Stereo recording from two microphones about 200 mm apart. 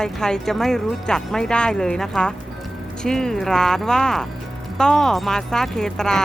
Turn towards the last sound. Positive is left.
turn(degrees=5)  # may be behind; listen again after turning